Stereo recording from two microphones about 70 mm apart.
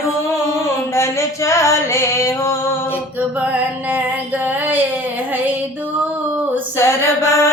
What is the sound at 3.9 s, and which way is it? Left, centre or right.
Female singing, right.